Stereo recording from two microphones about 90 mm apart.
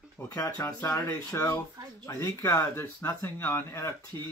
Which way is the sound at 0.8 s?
35° left (ahead or behind).